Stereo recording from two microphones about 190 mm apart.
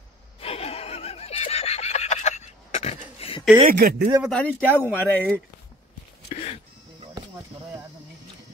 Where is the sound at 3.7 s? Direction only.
50° right (ahead or behind).